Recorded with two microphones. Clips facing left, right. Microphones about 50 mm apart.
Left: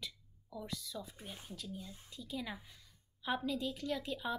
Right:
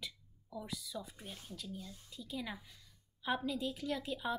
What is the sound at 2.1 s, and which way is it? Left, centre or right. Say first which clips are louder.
A woman's voice: even; centre.